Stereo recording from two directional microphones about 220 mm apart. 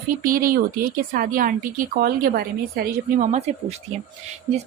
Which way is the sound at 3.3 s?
30° right (ahead or behind).